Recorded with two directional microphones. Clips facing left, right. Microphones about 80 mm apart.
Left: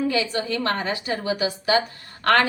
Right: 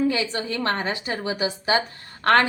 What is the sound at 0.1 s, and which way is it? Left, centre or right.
A woman's voice, right.